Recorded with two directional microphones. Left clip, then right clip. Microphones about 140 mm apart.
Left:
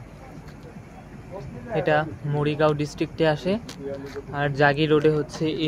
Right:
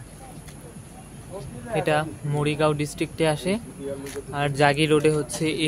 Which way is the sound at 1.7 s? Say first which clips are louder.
Left 1 dB; 10° right (ahead or behind).